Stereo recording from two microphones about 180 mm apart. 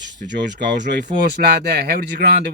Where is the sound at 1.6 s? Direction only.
55° right (ahead or behind).